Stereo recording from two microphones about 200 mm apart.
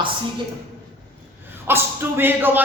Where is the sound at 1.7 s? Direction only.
10° right (ahead or behind).